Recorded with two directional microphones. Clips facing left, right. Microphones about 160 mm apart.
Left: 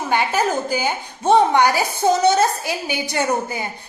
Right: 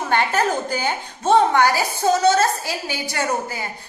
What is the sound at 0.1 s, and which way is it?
A woman's voice, 10° left (ahead or behind).